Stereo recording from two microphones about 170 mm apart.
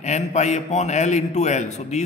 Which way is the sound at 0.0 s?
40° left (ahead or behind).